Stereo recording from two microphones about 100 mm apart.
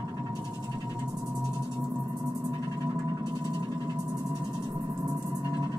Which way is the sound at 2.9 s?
40° right (ahead or behind).